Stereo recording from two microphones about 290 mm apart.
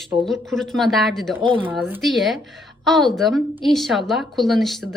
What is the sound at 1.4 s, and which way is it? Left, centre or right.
Speech, centre.